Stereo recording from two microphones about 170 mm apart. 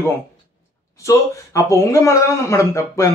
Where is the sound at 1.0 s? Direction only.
20° left (ahead or behind).